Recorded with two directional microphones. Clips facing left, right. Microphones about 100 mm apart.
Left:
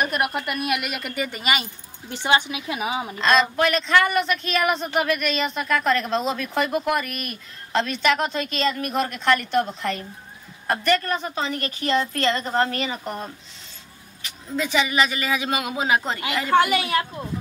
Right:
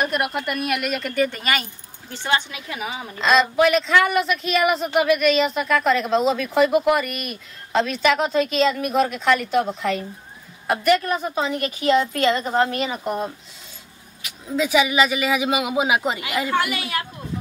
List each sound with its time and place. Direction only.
0.0 s a woman's voice: centre (ahead or behind); by 3.2 s 20° left (ahead or behind)
3.2 s a woman's voice: 5° right (ahead or behind)
16.5 s a woman's voice: 25° left (ahead or behind)